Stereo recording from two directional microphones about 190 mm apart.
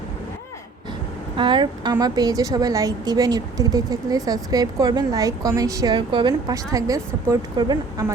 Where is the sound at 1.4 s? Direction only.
25° right (ahead or behind).